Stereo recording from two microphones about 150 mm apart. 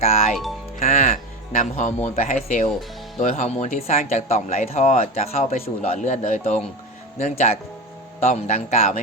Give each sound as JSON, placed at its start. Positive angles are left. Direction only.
{"t": 0.0, "sound": "speech", "side_deg": 45}
{"t": 0.8, "sound": "music", "side_deg": 50}
{"t": 2.3, "sound": "speech", "side_deg": 50}